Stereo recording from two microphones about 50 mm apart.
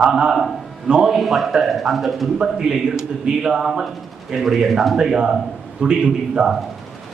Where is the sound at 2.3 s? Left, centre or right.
Centre.